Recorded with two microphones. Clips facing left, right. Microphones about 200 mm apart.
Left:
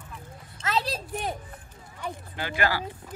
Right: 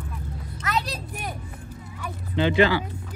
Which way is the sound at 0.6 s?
25° left (ahead or behind).